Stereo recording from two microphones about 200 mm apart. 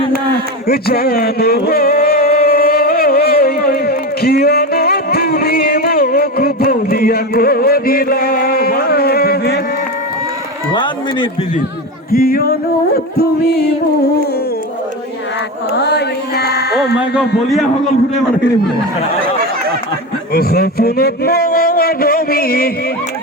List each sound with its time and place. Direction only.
0.7 s a sound: 50° left (ahead or behind)
12.1 s music: 45° left (ahead or behind)
15.7 s carnatic music: 55° left (ahead or behind)
17.2 s a man's voice: centre (ahead or behind)
20.3 s a man's voice: 50° left (ahead or behind)